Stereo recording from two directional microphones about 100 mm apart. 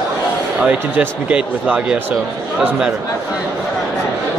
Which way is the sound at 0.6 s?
10° right (ahead or behind).